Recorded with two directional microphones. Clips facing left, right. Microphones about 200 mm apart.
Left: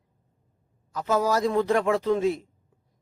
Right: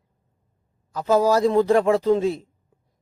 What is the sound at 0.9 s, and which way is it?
Speech, 35° right (ahead or behind).